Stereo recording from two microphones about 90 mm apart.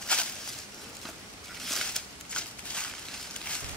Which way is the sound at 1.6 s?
5° left (ahead or behind).